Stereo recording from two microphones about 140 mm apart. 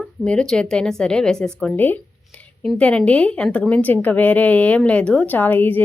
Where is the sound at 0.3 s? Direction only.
5° left (ahead or behind).